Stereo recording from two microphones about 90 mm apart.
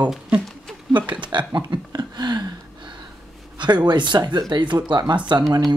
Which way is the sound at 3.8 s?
55° right (ahead or behind).